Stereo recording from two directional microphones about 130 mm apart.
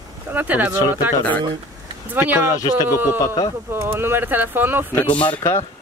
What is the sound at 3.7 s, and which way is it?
Speech, 20° right (ahead or behind).